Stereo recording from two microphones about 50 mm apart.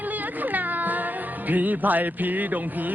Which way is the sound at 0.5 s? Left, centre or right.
Right.